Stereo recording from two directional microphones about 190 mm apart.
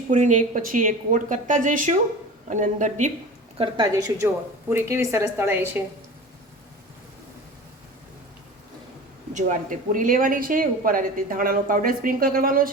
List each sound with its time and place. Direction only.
0.1 s a woman's voice: 40° right (ahead or behind)
3.6 s a woman's voice: 20° right (ahead or behind)
9.3 s speech: 40° right (ahead or behind)